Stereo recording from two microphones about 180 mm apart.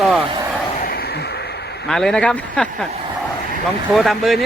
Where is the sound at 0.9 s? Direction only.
60° left (ahead or behind).